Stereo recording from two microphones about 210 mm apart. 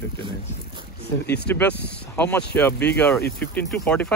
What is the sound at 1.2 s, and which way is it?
Speech, 55° left (ahead or behind).